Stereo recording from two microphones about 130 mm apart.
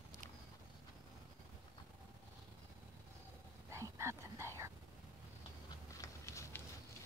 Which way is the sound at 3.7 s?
20° right (ahead or behind).